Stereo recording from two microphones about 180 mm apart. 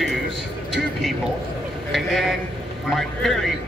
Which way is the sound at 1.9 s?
Centre (ahead or behind).